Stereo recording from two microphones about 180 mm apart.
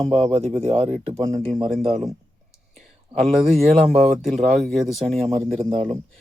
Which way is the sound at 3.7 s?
40° right (ahead or behind).